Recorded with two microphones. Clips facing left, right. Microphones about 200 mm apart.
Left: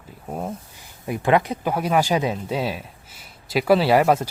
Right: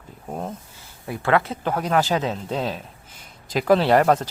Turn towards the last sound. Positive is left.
turn(degrees=10)  # may be behind; listen again after turning